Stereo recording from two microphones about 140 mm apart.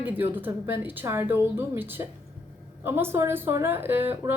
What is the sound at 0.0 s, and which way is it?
A woman's voice, 15° right (ahead or behind).